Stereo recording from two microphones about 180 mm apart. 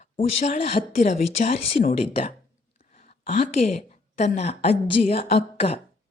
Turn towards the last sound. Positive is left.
turn(degrees=30)  # may be behind; listen again after turning